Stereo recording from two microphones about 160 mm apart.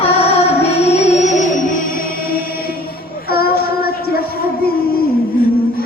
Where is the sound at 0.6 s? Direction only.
40° left (ahead or behind).